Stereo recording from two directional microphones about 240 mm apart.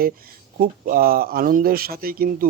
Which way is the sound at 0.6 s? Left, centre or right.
Right.